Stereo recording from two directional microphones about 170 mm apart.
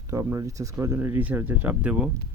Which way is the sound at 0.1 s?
20° right (ahead or behind).